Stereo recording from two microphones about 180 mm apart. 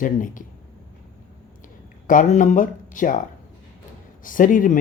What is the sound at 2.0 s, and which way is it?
Speech, 45° left (ahead or behind).